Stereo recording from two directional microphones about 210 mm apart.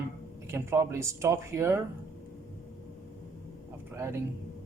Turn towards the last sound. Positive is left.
turn(degrees=-10)  # may be behind; listen again after turning